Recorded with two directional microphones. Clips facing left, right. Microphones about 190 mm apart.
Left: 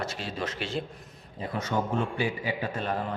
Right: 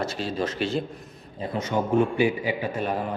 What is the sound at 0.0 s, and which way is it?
Speech, 35° right (ahead or behind).